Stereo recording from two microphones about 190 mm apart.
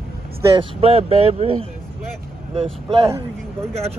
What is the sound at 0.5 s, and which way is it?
Speech, 30° right (ahead or behind).